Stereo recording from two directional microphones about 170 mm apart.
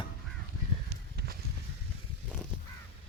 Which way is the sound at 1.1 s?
65° right (ahead or behind).